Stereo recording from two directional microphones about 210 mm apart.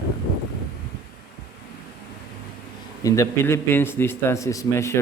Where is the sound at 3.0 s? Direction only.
15° left (ahead or behind).